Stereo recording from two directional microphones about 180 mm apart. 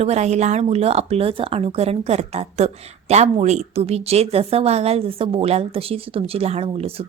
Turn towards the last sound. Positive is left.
turn(degrees=-35)  # may be behind; listen again after turning